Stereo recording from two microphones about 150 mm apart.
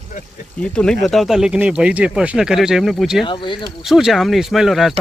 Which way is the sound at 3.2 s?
35° left (ahead or behind).